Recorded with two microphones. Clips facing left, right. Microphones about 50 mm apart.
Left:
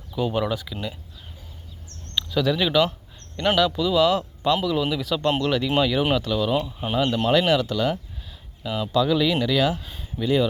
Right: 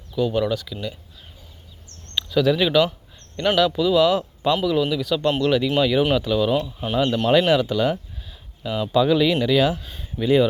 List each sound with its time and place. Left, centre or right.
0.1 s speech: centre
2.1 s speech: centre
4.8 s speech: centre
6.6 s speech: centre
6.9 s speech: centre
8.6 s speech: centre
8.9 s speech: centre
9.7 s speech: centre
10.2 s speech: centre